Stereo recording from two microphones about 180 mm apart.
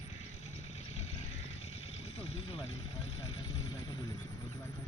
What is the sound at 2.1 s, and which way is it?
Vehicle, 35° left (ahead or behind).